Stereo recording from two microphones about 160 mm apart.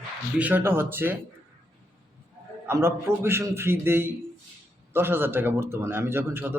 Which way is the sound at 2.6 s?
15° right (ahead or behind).